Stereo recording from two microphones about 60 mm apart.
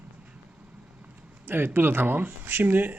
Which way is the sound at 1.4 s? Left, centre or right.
Right.